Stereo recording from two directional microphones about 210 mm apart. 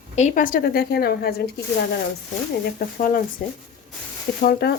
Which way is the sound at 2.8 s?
40° left (ahead or behind).